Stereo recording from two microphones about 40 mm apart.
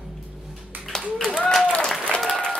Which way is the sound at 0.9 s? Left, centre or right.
Centre.